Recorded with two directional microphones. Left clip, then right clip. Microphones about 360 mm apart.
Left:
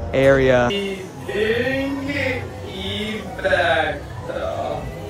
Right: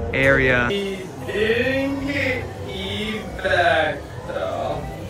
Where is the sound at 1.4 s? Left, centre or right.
Centre.